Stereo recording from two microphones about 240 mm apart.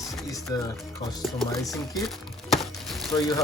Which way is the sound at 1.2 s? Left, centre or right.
Centre.